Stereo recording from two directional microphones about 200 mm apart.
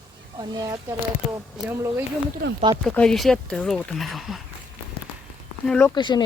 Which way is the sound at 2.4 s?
50° right (ahead or behind).